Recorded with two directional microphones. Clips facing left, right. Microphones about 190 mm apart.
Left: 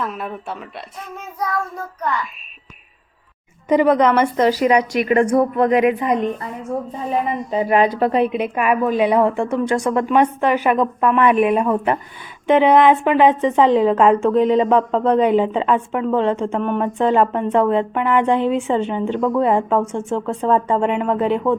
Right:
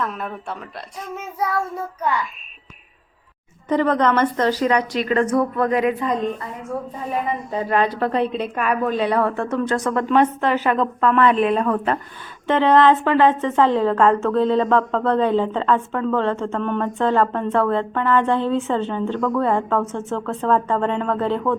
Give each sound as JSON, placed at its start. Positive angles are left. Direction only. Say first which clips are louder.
{"t": 0.0, "sound": "speech", "louder": "left 1 dB", "side_deg": 5}
{"t": 1.1, "sound": "child singing", "louder": "right 1 dB", "side_deg": -5}
{"t": 3.7, "sound": "a woman's voice", "louder": "left 4 dB", "side_deg": 10}